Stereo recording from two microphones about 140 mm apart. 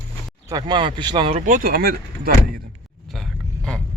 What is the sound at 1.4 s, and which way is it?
Speech, 70° right (ahead or behind).